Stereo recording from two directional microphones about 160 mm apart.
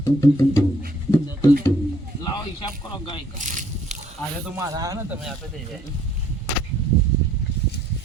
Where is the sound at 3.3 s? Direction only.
50° right (ahead or behind).